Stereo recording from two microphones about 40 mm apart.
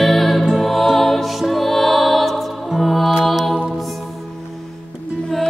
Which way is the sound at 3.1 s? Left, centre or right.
Centre.